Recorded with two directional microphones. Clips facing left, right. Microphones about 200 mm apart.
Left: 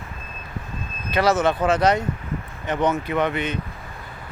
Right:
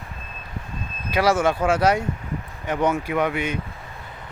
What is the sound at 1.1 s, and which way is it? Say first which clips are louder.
Speech: even; 10° right (ahead or behind).